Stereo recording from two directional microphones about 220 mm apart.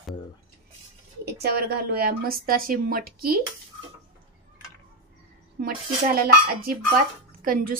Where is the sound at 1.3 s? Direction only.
45° right (ahead or behind).